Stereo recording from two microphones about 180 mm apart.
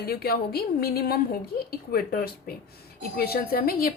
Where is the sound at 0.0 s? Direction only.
60° left (ahead or behind).